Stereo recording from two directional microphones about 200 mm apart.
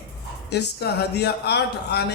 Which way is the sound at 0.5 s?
55° left (ahead or behind).